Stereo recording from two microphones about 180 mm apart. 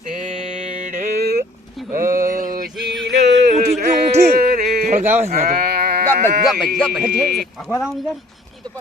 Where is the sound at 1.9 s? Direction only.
50° right (ahead or behind).